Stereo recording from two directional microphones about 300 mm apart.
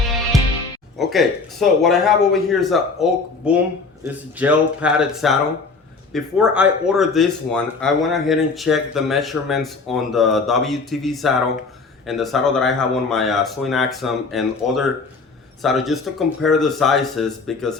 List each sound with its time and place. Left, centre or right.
0.9 s speech: centre